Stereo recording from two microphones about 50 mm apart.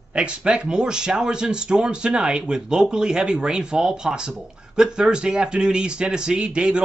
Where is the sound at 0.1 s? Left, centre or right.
Centre.